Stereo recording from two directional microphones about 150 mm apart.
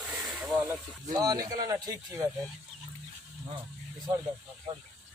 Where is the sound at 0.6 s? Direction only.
25° right (ahead or behind).